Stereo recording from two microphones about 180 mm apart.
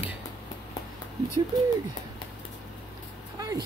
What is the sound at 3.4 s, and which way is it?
Vehicle, 20° right (ahead or behind).